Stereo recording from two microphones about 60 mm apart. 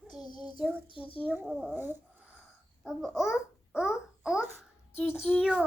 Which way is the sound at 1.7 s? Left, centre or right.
Right.